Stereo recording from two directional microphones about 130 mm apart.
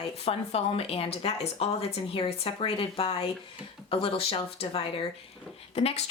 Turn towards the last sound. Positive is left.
turn(degrees=55)  # may be behind; listen again after turning